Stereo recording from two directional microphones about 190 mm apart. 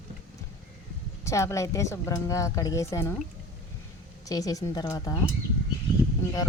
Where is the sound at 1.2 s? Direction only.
15° left (ahead or behind).